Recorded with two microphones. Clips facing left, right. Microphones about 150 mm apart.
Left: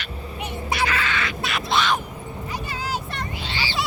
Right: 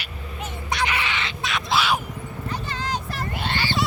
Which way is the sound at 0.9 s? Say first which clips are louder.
Left 2 dB; 20° right (ahead or behind).